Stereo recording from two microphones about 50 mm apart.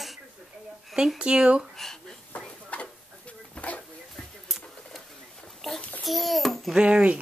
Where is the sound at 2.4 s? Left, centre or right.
Centre.